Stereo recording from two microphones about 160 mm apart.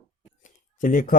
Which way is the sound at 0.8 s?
55° left (ahead or behind).